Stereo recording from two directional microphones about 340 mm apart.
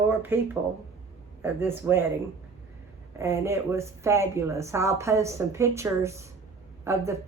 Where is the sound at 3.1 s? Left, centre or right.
Centre.